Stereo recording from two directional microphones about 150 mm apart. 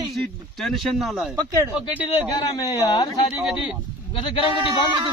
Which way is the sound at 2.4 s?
25° left (ahead or behind).